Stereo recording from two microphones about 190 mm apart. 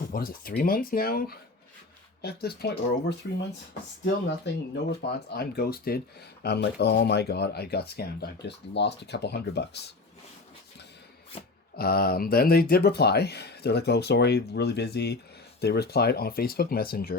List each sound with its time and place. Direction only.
0.1 s speech: 50° left (ahead or behind)
11.8 s speech: 55° left (ahead or behind)